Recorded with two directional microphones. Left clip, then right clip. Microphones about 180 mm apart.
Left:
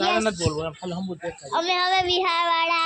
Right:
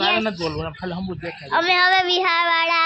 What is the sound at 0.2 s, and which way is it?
Speech, 20° right (ahead or behind).